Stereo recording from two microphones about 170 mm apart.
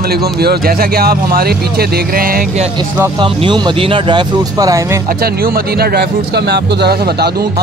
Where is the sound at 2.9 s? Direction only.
15° right (ahead or behind).